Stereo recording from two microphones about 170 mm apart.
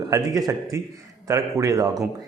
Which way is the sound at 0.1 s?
20° right (ahead or behind).